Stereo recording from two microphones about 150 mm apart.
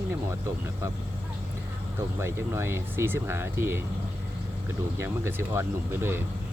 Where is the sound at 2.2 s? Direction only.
20° right (ahead or behind).